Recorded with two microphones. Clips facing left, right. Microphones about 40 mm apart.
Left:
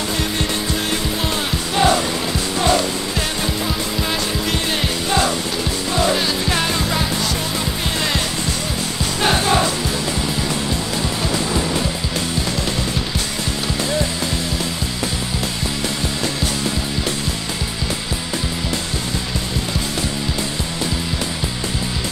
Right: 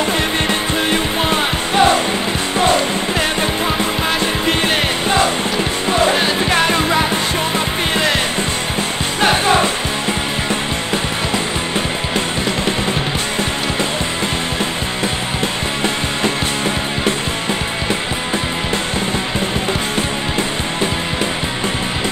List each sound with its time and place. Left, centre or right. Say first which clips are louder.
0.8 s music: right 5 dB; right
6.0 s music: right 4 dB; right